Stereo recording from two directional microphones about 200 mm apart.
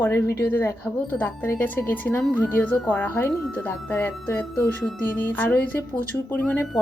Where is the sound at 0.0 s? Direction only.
10° left (ahead or behind).